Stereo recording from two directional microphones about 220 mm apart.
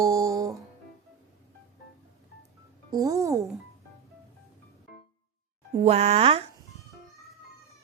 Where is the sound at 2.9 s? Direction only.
15° right (ahead or behind).